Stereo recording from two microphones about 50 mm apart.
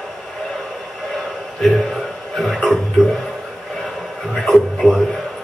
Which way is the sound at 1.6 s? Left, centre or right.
Centre.